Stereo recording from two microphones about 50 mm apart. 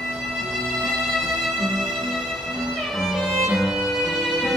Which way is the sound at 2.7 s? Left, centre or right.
Centre.